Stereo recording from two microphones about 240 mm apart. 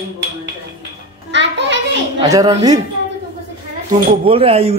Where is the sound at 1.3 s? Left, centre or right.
Right.